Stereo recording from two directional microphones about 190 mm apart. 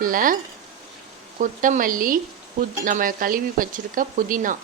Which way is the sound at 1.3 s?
45° right (ahead or behind).